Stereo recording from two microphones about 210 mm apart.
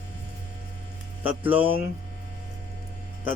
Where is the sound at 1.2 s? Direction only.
10° right (ahead or behind).